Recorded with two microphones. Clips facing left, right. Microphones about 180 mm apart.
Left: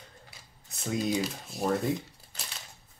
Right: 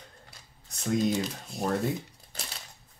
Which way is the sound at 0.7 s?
5° left (ahead or behind).